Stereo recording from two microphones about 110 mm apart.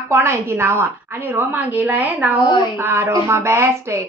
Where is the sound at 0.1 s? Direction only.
20° right (ahead or behind).